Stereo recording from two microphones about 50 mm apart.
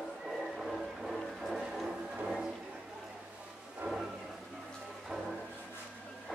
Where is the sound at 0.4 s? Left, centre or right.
Centre.